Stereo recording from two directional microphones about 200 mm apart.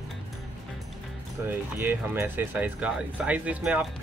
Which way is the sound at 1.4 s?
10° right (ahead or behind).